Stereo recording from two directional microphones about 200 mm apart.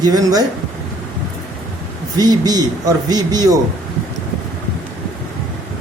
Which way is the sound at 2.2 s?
20° right (ahead or behind).